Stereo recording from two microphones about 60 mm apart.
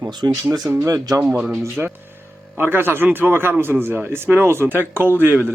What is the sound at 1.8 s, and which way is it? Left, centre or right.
Speech, centre.